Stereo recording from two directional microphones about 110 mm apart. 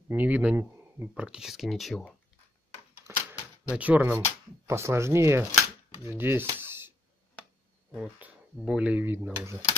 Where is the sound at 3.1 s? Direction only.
20° right (ahead or behind).